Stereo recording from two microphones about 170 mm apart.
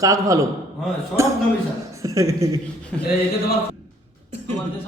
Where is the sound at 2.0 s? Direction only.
20° right (ahead or behind).